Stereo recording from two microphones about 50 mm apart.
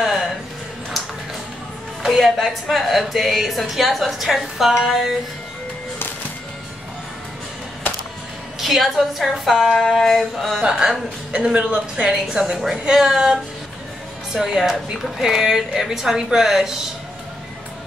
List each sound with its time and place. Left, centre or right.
0.0 s music: centre
2.0 s a woman's voice: centre
8.5 s a woman's voice: centre
10.6 s a woman's voice: centre